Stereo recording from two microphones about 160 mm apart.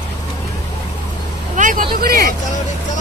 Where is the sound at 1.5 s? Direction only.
55° right (ahead or behind).